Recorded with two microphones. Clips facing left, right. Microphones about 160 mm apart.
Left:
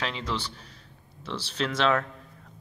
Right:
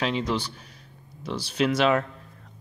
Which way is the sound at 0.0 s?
15° right (ahead or behind).